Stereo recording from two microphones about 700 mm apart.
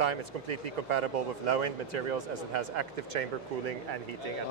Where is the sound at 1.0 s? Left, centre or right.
Right.